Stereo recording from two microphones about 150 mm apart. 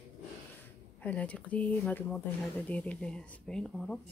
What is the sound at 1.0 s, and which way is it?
Speech, 10° left (ahead or behind).